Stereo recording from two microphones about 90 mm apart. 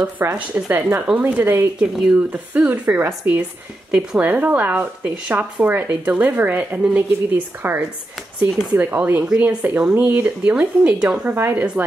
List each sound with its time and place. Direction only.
0.0 s speech: 20° right (ahead or behind)
1.8 s speech: 10° right (ahead or behind)
8.5 s speech: 5° right (ahead or behind)
8.7 s speech: 20° right (ahead or behind)
11.3 s speech: 25° right (ahead or behind)